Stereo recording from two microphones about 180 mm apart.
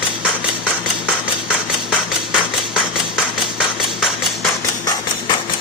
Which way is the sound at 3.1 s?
5° right (ahead or behind).